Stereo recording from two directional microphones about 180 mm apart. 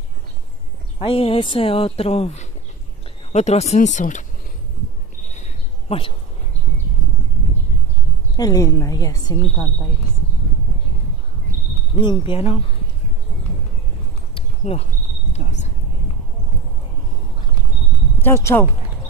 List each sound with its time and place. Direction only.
0.9 s speech: 30° left (ahead or behind)
5.3 s cricket: 35° left (ahead or behind)
8.4 s speech: 20° left (ahead or behind)
11.9 s speech: 30° left (ahead or behind)
14.3 s a sound: 35° left (ahead or behind)
18.2 s speech: 15° left (ahead or behind)